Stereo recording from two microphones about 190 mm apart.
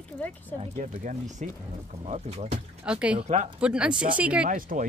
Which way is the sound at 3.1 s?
30° right (ahead or behind).